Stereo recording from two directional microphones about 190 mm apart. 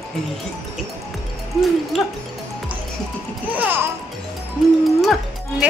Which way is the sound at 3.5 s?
10° right (ahead or behind).